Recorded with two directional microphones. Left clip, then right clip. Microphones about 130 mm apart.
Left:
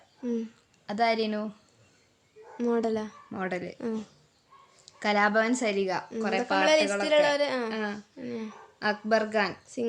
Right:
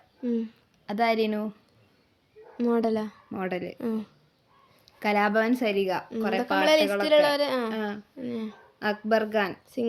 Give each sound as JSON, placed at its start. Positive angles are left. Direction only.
{"t": 0.2, "sound": "a woman's voice", "side_deg": -20}
{"t": 2.6, "sound": "speech", "side_deg": -20}